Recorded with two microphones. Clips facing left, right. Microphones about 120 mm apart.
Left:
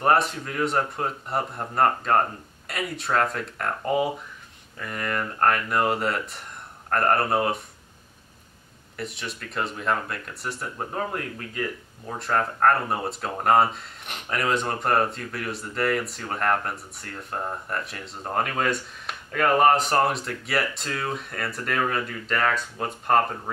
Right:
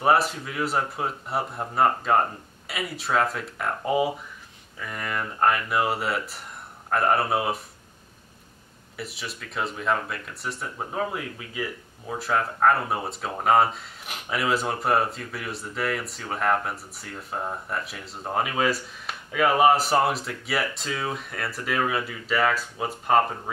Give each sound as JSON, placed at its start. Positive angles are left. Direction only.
{"t": 0.0, "sound": "speech", "side_deg": -5}
{"t": 8.9, "sound": "speech", "side_deg": -5}